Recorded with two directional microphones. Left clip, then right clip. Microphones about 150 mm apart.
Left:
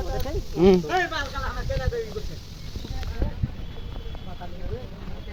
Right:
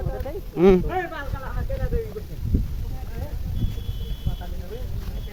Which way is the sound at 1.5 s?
25° right (ahead or behind).